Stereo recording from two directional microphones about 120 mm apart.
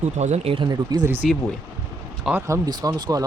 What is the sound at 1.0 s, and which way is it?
Speech, 15° right (ahead or behind).